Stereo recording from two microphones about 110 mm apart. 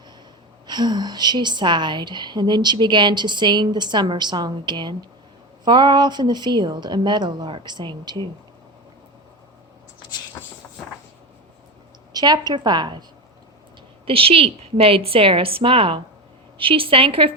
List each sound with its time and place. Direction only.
0.7 s a woman's voice: 40° right (ahead or behind)
12.1 s a woman's voice: 40° right (ahead or behind)
14.0 s a woman's voice: 60° right (ahead or behind)